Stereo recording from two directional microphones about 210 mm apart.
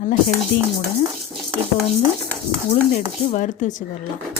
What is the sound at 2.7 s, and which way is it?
A woman's voice, 35° left (ahead or behind).